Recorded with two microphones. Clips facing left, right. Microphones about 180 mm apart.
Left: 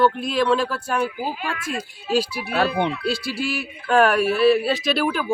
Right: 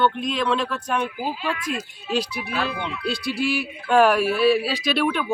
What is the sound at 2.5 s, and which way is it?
Speech, 60° left (ahead or behind).